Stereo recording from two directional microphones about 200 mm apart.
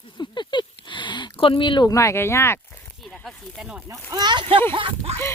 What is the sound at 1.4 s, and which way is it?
Speech, 25° left (ahead or behind).